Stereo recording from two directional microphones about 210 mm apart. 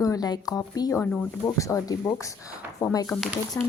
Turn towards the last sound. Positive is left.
turn(degrees=15)  # may be behind; listen again after turning